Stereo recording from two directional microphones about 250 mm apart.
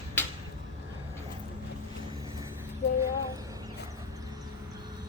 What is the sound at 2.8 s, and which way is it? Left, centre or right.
Child singing, left.